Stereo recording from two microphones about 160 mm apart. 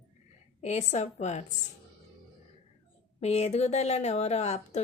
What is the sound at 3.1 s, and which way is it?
Speech, 40° left (ahead or behind).